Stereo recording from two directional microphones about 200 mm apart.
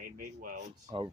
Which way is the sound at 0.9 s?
20° right (ahead or behind).